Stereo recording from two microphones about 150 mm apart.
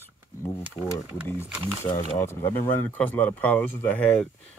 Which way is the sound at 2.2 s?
15° left (ahead or behind).